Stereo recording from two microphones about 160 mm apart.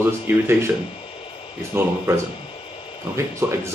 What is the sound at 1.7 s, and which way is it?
Speech, 15° right (ahead or behind).